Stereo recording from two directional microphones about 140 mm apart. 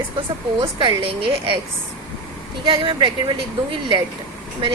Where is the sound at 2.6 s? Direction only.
40° right (ahead or behind).